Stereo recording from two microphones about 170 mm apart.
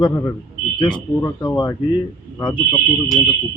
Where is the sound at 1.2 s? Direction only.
25° left (ahead or behind).